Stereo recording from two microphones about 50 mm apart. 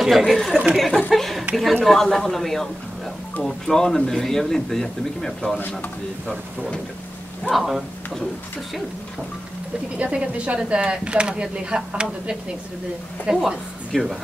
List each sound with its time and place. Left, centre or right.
0.0 s a man's voice: centre
7.5 s speech: centre
10.1 s speech: right
13.9 s a man's voice: centre